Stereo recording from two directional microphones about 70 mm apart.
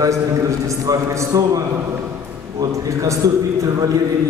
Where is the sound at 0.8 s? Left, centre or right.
Right.